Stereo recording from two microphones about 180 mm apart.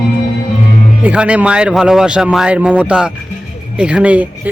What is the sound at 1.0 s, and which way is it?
Speech, 5° right (ahead or behind).